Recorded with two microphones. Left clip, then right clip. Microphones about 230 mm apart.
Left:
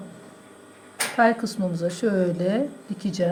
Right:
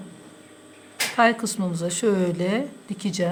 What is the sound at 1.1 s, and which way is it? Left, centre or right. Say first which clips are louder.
Speech: even; right.